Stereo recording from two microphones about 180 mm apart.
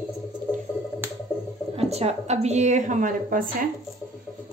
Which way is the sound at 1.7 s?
35° right (ahead or behind).